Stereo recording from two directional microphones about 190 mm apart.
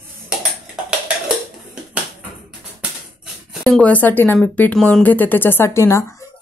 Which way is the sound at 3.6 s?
5° left (ahead or behind).